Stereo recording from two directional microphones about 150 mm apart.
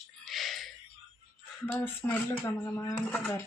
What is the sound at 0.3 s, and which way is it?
Music, centre (ahead or behind).